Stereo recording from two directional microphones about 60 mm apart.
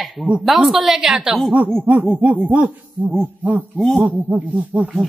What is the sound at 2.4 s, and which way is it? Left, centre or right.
Speech, right.